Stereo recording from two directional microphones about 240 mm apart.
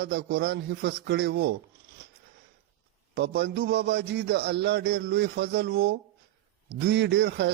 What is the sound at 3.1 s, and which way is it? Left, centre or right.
A man's voice, right.